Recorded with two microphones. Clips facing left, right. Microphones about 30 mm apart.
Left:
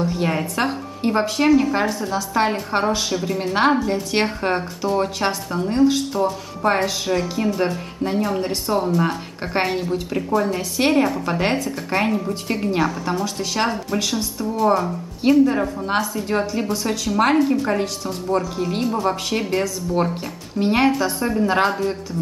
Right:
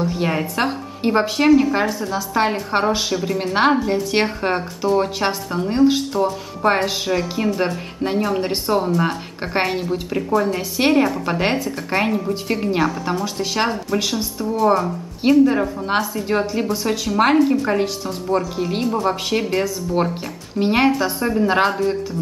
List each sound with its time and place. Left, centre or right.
0.0 s a woman's voice: centre
8.4 s speech: right
8.7 s a woman's voice: centre